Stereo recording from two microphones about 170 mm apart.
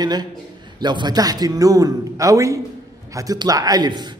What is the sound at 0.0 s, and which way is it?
Music, 25° right (ahead or behind).